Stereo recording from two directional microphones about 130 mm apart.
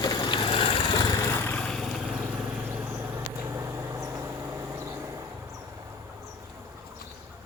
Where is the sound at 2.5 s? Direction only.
15° right (ahead or behind).